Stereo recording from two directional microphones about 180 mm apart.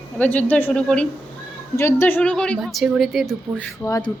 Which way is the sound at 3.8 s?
15° left (ahead or behind).